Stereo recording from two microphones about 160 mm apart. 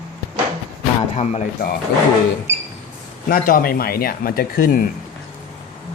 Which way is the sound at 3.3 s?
65° left (ahead or behind).